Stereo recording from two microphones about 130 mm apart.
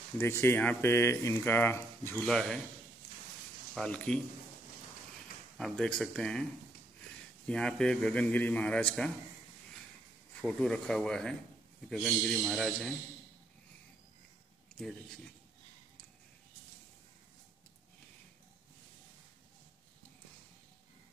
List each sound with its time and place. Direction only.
0.2 s speech: 20° left (ahead or behind)
2.1 s a man's voice: 5° left (ahead or behind)
3.7 s a man's voice: 10° left (ahead or behind)
5.6 s a man's voice: 5° left (ahead or behind)
7.4 s a man's voice: 5° left (ahead or behind)
10.4 s a man's voice: 5° left (ahead or behind)